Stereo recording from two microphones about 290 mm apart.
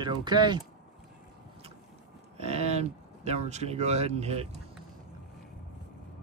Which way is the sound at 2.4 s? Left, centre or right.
Right.